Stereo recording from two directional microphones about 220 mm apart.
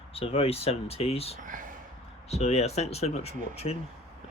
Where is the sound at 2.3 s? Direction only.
30° left (ahead or behind).